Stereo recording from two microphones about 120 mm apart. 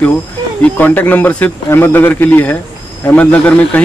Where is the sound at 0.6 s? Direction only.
15° left (ahead or behind).